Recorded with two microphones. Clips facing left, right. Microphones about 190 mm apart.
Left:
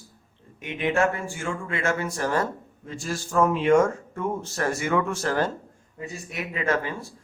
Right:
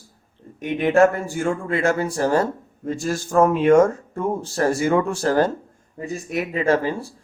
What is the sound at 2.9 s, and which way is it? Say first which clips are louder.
Speech: right 6 dB; 45° right (ahead or behind).